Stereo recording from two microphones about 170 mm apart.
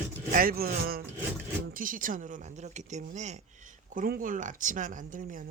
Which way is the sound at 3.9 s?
55° right (ahead or behind).